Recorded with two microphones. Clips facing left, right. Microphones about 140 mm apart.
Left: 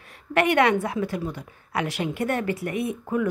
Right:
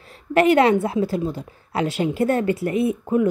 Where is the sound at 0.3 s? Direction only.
25° right (ahead or behind).